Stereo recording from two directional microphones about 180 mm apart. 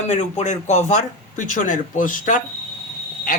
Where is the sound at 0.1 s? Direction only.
40° left (ahead or behind).